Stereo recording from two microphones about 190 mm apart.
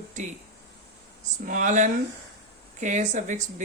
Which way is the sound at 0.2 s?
40° right (ahead or behind).